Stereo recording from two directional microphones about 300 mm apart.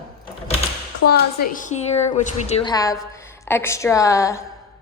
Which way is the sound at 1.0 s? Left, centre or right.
Left.